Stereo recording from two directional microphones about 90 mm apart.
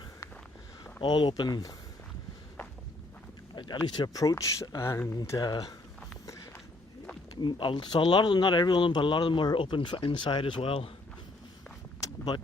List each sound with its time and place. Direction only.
1.0 s speech: 60° left (ahead or behind)
3.5 s speech: 55° left (ahead or behind)
4.1 s speech: 40° left (ahead or behind)
4.8 s speech: 30° left (ahead or behind)
5.1 s speech: 40° left (ahead or behind)
7.4 s speech: 60° left (ahead or behind); by 10.9 s 90° left
12.0 s vehicle: 50° left (ahead or behind)